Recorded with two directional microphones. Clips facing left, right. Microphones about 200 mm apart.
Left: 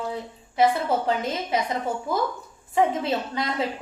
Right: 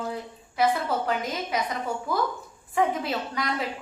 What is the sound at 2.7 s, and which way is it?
Speech, 25° left (ahead or behind).